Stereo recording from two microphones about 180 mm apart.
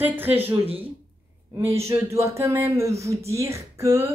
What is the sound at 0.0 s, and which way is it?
Speech, 10° right (ahead or behind).